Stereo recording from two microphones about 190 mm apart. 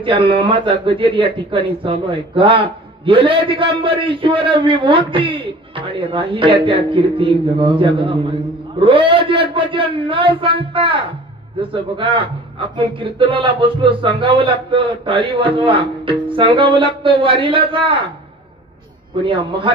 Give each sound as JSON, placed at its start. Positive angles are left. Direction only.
{"t": 0.0, "sound": "a man's voice", "side_deg": -25}
{"t": 19.2, "sound": "a man's voice", "side_deg": -25}